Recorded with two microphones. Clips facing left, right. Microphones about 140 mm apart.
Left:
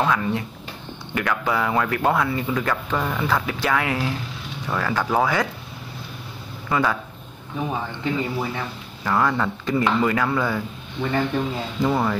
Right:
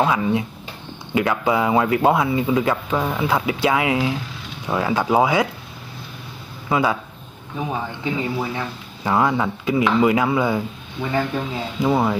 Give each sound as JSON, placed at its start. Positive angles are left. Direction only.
{"t": 0.0, "sound": "speech", "side_deg": -15}
{"t": 6.7, "sound": "speech", "side_deg": -15}
{"t": 8.0, "sound": "speech", "side_deg": -5}
{"t": 9.0, "sound": "speech", "side_deg": -15}